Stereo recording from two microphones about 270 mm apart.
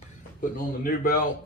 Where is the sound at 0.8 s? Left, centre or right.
Left.